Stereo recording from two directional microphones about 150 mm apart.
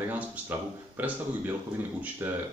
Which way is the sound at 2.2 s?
15° right (ahead or behind).